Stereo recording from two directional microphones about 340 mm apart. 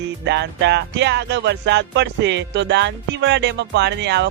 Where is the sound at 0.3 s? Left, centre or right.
Right.